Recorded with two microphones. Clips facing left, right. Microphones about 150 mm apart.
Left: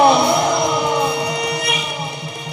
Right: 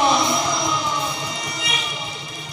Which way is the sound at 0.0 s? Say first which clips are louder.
Left 6 dB; 65° left (ahead or behind).